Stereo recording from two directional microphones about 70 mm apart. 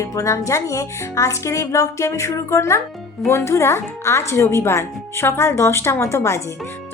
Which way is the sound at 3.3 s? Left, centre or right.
Left.